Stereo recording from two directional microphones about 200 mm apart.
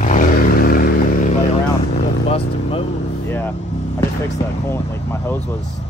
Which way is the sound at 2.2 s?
30° left (ahead or behind).